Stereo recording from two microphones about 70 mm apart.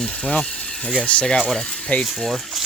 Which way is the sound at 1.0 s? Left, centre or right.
Centre.